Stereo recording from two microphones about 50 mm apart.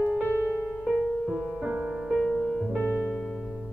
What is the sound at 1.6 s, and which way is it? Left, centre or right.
Music, centre.